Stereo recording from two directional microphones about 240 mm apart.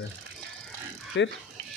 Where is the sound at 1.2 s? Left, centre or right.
Left.